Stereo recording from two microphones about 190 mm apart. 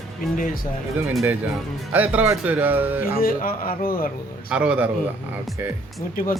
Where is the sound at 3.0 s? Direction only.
50° left (ahead or behind).